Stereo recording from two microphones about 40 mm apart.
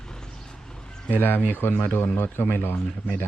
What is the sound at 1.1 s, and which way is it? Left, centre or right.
Speech, left.